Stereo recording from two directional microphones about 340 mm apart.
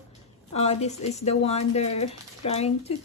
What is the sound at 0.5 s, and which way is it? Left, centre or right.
A woman's voice, centre.